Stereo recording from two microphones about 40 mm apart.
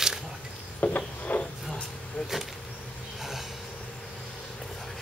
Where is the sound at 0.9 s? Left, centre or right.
Left.